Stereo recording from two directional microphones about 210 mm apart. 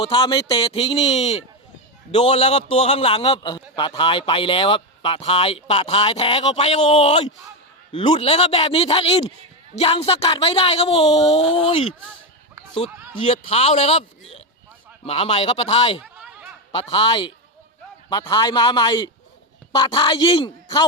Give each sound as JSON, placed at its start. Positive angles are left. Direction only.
{"t": 0.0, "sound": "a man's voice", "side_deg": 25}
{"t": 15.0, "sound": "a man's voice", "side_deg": 30}
{"t": 16.0, "sound": "a sound", "side_deg": -5}
{"t": 16.7, "sound": "a man's voice", "side_deg": 25}